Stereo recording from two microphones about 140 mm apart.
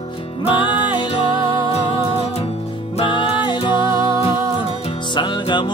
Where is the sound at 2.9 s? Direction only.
40° left (ahead or behind).